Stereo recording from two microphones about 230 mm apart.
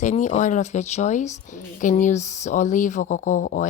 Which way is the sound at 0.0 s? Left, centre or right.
Left.